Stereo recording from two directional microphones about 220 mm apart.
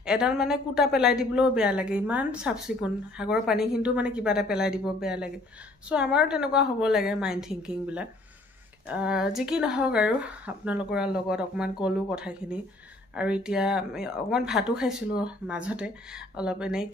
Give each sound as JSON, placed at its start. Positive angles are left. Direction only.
{"t": 0.0, "sound": "speech", "side_deg": -5}